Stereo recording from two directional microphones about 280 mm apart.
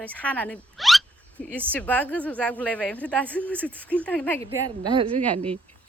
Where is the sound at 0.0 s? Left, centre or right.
Centre.